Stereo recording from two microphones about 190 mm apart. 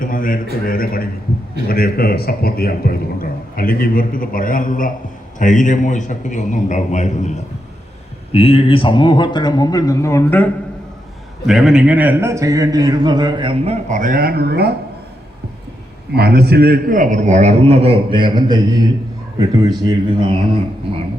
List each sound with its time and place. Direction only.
0.0 s a man's voice: 45° left (ahead or behind); by 10.5 s 10° left (ahead or behind)
11.4 s a man's voice: centre (ahead or behind); by 13.7 s 25° right (ahead or behind)
13.8 s speech: 40° right (ahead or behind)
16.1 s a man's voice: 55° right (ahead or behind); by 20.3 s 25° right (ahead or behind)